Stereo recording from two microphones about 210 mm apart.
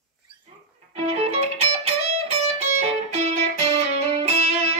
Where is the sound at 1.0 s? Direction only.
30° right (ahead or behind).